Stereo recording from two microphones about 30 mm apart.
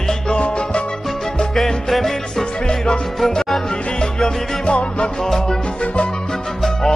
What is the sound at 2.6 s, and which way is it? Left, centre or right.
Music, left.